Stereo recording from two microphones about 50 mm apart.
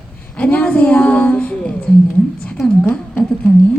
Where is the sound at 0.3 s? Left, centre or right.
Left.